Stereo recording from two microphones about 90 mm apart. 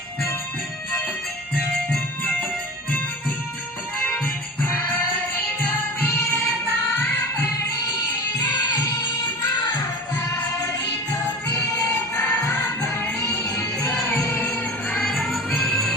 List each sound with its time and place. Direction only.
4.6 s music: 20° left (ahead or behind)
8.4 s music: 50° left (ahead or behind)
14.3 s music: 15° left (ahead or behind)
15.0 s music: centre (ahead or behind)